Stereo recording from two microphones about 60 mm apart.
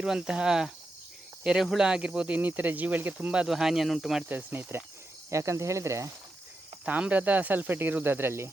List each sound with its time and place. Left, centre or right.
0.0 s cricket: centre
1.5 s speech: centre; by 3.4 s right
3.4 s speech: centre
4.3 s speech: right
5.3 s speech: right
7.1 s speech: right